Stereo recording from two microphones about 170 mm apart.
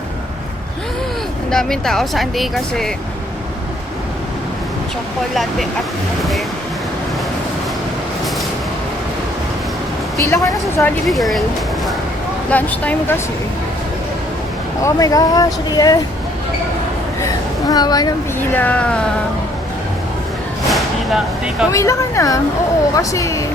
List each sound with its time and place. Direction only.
1.5 s speech: 5° left (ahead or behind)
5.3 s speech: centre (ahead or behind)
10.2 s speech: 20° left (ahead or behind)
10.8 s speech: centre (ahead or behind)
12.5 s speech: 10° left (ahead or behind)
14.8 s speech: 20° left (ahead or behind)
17.2 s a sound: 20° left (ahead or behind)
18.3 s speech: 10° left (ahead or behind)
20.7 s vehicle: centre (ahead or behind)
21.7 s speech: 15° left (ahead or behind)